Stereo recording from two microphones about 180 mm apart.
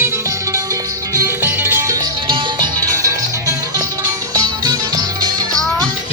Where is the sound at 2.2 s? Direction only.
30° right (ahead or behind).